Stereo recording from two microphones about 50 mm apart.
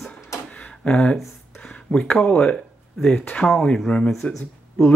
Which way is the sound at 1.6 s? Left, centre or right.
Centre.